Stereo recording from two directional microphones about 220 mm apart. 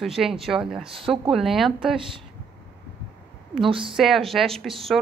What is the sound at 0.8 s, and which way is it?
Speech, 25° right (ahead or behind).